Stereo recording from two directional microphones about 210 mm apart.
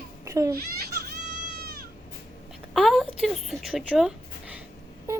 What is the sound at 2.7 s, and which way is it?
Speech, centre (ahead or behind).